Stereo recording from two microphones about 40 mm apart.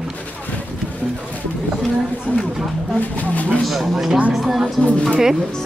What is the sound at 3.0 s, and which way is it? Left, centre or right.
Speech, left.